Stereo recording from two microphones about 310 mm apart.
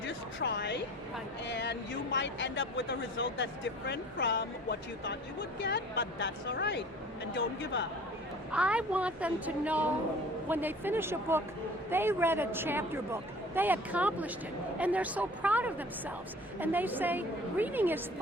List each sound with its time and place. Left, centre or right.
0.1 s a sound: left
1.5 s speech: left
8.5 s a woman's voice: centre